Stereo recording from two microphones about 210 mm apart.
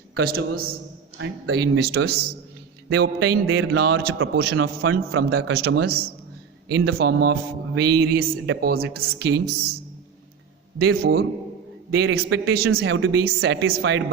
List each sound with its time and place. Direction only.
0.2 s a man's voice: 45° right (ahead or behind)
3.4 s speech: 70° right (ahead or behind)
4.5 s a man's voice: 75° right (ahead or behind)
5.5 s a man's voice: 50° right (ahead or behind)
10.8 s a man's voice: 50° right (ahead or behind)
12.0 s speech: 70° right (ahead or behind)